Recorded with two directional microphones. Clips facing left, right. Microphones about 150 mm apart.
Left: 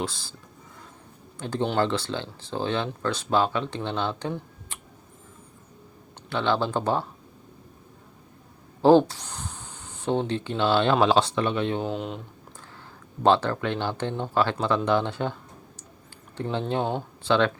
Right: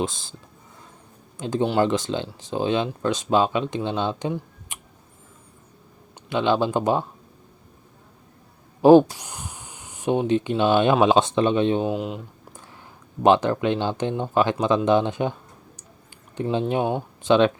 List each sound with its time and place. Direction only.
0.0 s speech: 20° right (ahead or behind)
1.4 s speech: 15° right (ahead or behind)
4.7 s tick: 15° right (ahead or behind)
6.2 s speech: 15° right (ahead or behind)
8.8 s speech: 15° right (ahead or behind)
11.9 s speech: 5° right (ahead or behind)
13.2 s speech: 15° right (ahead or behind)